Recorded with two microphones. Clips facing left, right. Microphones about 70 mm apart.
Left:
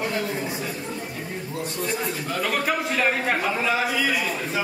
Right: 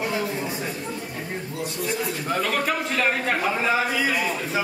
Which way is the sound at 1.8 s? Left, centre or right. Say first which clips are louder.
Right 2 dB; centre.